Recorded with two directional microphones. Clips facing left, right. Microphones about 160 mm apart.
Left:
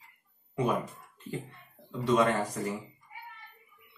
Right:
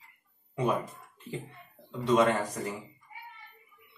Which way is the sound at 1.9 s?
5° right (ahead or behind).